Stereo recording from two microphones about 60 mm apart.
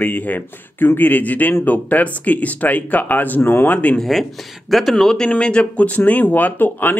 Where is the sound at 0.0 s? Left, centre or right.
Left.